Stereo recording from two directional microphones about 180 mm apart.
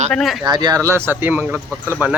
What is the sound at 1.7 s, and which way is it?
Speech, 10° left (ahead or behind).